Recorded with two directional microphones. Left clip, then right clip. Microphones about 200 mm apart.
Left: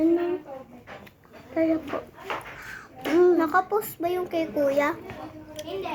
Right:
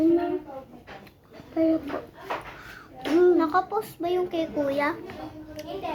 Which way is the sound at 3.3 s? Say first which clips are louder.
Left 1 dB; 55° left (ahead or behind).